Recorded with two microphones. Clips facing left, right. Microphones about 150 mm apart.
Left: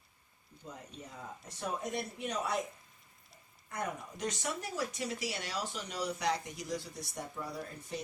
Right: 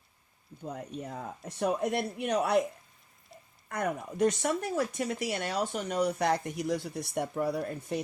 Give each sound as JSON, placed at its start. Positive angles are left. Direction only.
{"t": 0.6, "sound": "speech", "side_deg": -60}
{"t": 3.7, "sound": "speech", "side_deg": -60}